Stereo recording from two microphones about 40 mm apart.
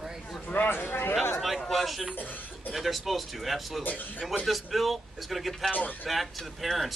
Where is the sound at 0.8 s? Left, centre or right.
Left.